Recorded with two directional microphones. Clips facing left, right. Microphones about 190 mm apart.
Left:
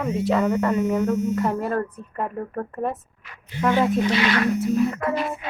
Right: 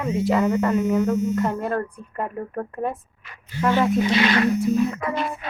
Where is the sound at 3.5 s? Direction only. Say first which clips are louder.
Even; 20° left (ahead or behind).